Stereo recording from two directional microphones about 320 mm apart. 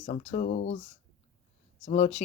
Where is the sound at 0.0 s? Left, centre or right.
Left.